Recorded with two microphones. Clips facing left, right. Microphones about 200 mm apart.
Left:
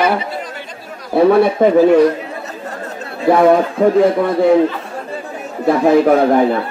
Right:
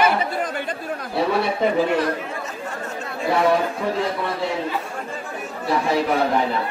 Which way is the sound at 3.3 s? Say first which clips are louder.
Left 8 dB; 50° left (ahead or behind).